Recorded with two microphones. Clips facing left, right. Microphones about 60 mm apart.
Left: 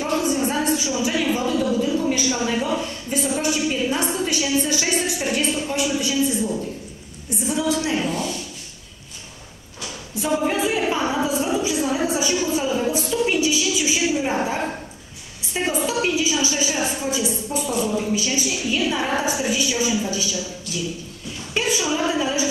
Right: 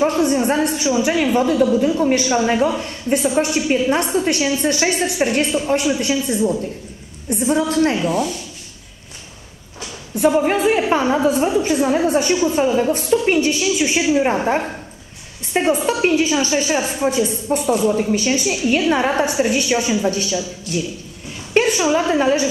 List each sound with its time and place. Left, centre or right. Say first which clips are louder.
0.0 s a sound: right 5 dB; right
1.3 s a woman's voice: right 6 dB; right
7.2 s a woman's voice: right 5 dB; right
10.1 s a woman's voice: right 6 dB; right